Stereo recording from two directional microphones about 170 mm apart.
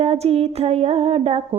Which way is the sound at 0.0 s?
35° right (ahead or behind).